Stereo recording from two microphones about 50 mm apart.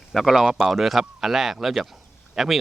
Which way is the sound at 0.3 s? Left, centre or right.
Centre.